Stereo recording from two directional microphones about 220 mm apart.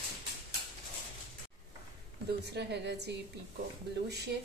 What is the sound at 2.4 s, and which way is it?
Speech, 50° right (ahead or behind).